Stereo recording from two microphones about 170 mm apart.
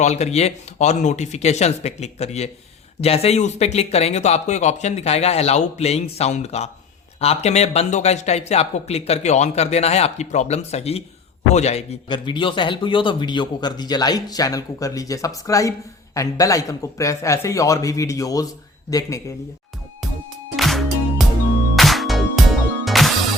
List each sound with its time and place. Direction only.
0.0 s a man's voice: 40° left (ahead or behind); by 19.2 s 20° left (ahead or behind)
20.6 s music: centre (ahead or behind)